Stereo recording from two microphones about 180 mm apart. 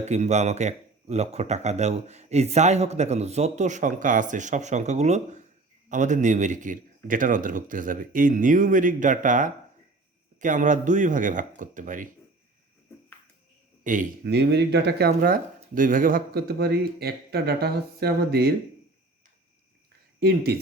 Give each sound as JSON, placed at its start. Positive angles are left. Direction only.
{"t": 0.0, "sound": "a man's voice", "side_deg": -40}
{"t": 13.8, "sound": "a man's voice", "side_deg": -45}
{"t": 14.3, "sound": "speech", "side_deg": -70}
{"t": 20.1, "sound": "speech", "side_deg": -60}